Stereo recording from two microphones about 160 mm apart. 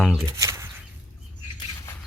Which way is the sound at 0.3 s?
20° right (ahead or behind).